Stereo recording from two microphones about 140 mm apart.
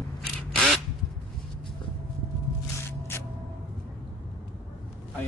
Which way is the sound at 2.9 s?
15° left (ahead or behind).